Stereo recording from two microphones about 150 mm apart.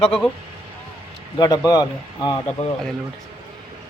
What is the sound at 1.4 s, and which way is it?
Speech, 25° left (ahead or behind).